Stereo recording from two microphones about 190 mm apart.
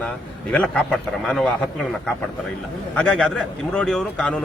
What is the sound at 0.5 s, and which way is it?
A man's voice, 5° left (ahead or behind).